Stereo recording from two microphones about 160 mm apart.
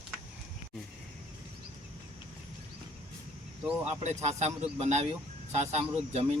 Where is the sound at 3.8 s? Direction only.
45° right (ahead or behind).